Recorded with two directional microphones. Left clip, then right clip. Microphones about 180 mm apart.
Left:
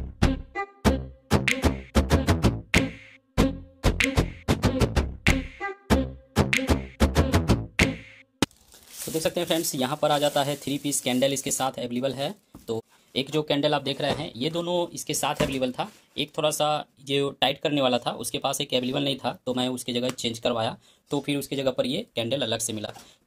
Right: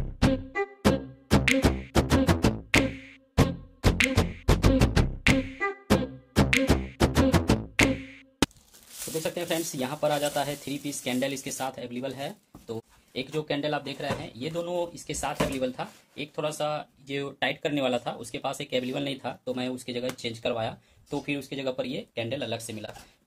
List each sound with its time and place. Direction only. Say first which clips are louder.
1.4 s music: right 3 dB; centre (ahead or behind)
8.4 s a sound: even; centre (ahead or behind)
9.2 s speech: left 5 dB; 60° left (ahead or behind)